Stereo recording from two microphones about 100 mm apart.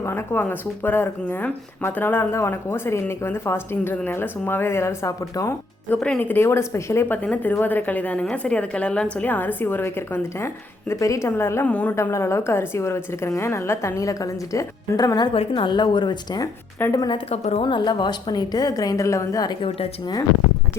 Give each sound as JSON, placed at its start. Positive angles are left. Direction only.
{"t": 0.0, "sound": "speech", "side_deg": 25}
{"t": 5.9, "sound": "a woman's voice", "side_deg": 15}
{"t": 6.3, "sound": "speech", "side_deg": 25}
{"t": 7.2, "sound": "a woman's voice", "side_deg": 15}
{"t": 11.6, "sound": "a woman's voice", "side_deg": 15}
{"t": 11.9, "sound": "speech", "side_deg": 25}
{"t": 15.3, "sound": "a woman's voice", "side_deg": 60}
{"t": 17.1, "sound": "a woman's voice", "side_deg": 85}
{"t": 17.7, "sound": "a woman's voice", "side_deg": 50}